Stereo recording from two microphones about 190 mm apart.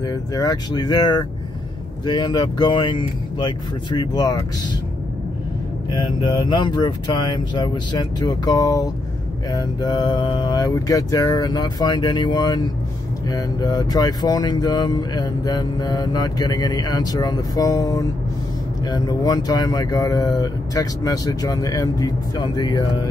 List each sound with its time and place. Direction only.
0.0 s speech: 20° left (ahead or behind)
5.9 s speech: 25° left (ahead or behind)